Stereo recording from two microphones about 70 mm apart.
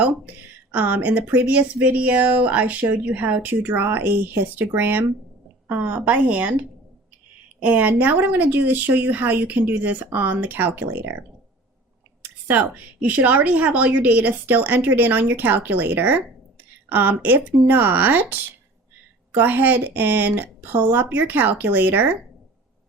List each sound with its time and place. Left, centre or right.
0.0 s speech: right
12.2 s speech: right